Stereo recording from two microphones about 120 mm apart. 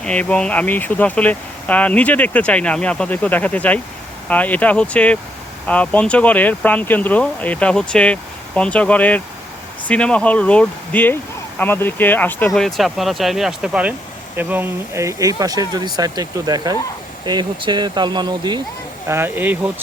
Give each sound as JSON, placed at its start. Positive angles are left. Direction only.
{"t": 0.0, "sound": "speech", "side_deg": 10}
{"t": 12.5, "sound": "speech", "side_deg": 0}
{"t": 19.0, "sound": "speech", "side_deg": -20}